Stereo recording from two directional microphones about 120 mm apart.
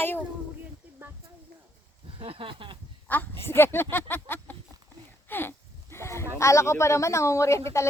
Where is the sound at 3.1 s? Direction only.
15° left (ahead or behind).